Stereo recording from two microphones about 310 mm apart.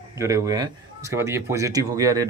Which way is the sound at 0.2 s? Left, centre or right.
Centre.